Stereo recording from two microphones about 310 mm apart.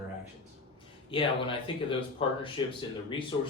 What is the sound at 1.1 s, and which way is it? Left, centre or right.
Speech, centre.